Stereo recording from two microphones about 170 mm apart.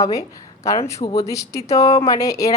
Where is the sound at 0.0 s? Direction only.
20° left (ahead or behind).